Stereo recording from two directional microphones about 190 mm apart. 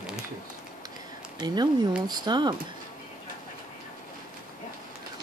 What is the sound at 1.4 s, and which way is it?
Speech, 20° right (ahead or behind).